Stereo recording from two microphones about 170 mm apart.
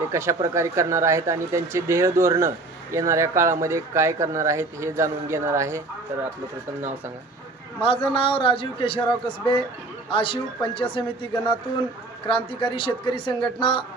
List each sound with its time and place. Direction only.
0.1 s a man's voice: 15° right (ahead or behind)
7.8 s a man's voice: 35° left (ahead or behind)